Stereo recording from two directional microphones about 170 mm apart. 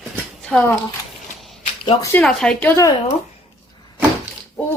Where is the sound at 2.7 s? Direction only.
20° left (ahead or behind).